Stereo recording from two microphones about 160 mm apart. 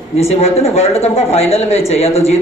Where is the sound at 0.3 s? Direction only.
40° left (ahead or behind).